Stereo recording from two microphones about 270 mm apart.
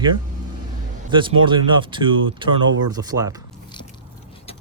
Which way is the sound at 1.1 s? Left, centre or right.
Centre.